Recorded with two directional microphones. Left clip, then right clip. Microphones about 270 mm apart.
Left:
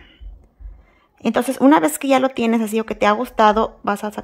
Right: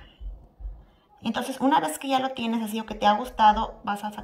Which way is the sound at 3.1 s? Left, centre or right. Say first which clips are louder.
Left 4 dB; left.